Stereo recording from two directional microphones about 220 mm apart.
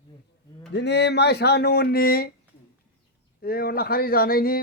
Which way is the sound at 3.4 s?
45° left (ahead or behind).